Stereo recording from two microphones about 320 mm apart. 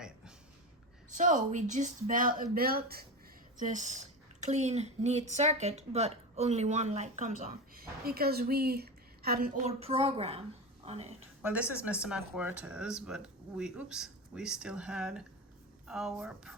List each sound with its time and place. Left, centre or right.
1.1 s a woman's voice: right
11.4 s speech: centre